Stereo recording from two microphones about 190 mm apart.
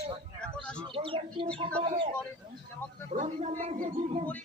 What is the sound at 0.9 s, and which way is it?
Speech, 25° right (ahead or behind).